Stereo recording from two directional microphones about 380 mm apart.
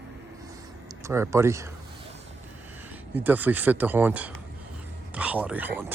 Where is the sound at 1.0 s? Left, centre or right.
Centre.